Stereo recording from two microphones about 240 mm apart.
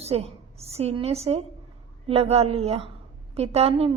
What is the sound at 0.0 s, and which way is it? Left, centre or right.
A woman's voice, right.